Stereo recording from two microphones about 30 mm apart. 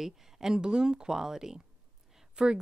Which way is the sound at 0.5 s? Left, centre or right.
Right.